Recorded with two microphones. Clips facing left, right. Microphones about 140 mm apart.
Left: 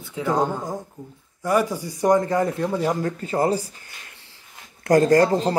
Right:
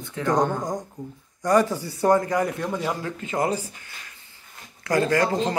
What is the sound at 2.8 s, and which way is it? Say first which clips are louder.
Speech: left 5 dB; 40° left (ahead or behind).